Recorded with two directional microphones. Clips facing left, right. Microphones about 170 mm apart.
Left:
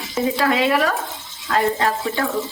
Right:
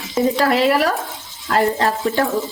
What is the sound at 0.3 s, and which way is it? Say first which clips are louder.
Speech: right 1 dB; 35° right (ahead or behind).